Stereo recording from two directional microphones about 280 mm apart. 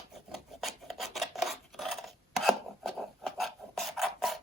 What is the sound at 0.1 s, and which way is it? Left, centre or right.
Filing, centre.